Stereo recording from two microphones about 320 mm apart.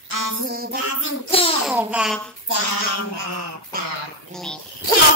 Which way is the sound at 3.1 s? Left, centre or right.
Right.